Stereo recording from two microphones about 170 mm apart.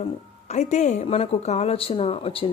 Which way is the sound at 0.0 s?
40° left (ahead or behind).